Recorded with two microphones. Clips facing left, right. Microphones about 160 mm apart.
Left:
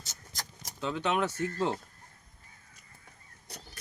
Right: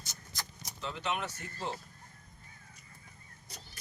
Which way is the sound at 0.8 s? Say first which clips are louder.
Left 7 dB; 85° left.